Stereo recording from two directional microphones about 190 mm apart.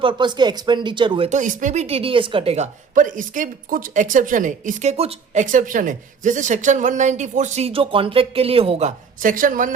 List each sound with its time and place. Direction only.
0.0 s speech: 25° right (ahead or behind)
1.3 s a woman's voice: 40° right (ahead or behind)
9.2 s speech: 45° right (ahead or behind)